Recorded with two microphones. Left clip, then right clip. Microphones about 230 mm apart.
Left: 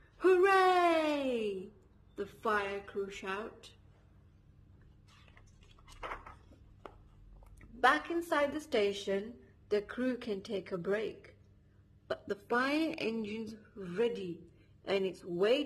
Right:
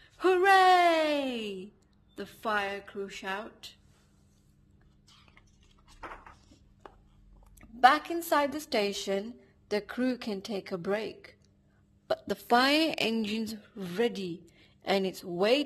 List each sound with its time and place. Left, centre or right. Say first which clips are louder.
0.2 s a sound: right 4 dB; right
2.1 s speech: right 2 dB; right
7.5 s a woman's voice: right 6 dB; right